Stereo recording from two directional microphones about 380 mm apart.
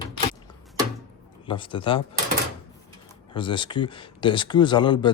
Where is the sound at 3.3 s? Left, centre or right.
Centre.